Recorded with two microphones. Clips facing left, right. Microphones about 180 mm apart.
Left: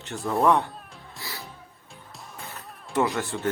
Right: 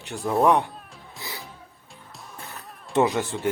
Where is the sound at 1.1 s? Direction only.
20° right (ahead or behind).